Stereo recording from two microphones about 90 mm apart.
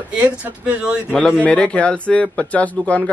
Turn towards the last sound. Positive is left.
turn(degrees=15)  # may be behind; listen again after turning